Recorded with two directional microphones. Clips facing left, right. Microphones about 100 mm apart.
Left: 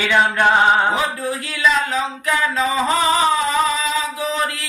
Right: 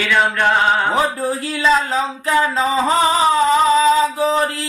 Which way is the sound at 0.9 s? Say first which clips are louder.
Right 4 dB; 35° right (ahead or behind).